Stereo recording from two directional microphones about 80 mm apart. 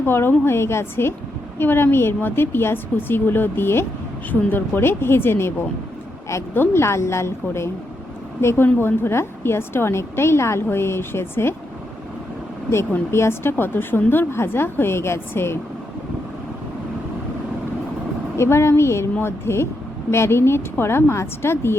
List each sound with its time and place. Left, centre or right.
0.0 s a woman's voice: left
13.1 s a woman's voice: left
18.3 s a woman's voice: left